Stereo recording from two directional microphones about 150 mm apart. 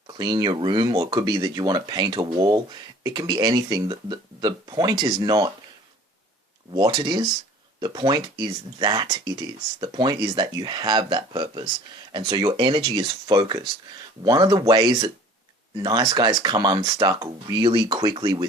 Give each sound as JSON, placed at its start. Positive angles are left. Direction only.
{"t": 0.1, "sound": "speech", "side_deg": -30}
{"t": 6.7, "sound": "speech", "side_deg": -30}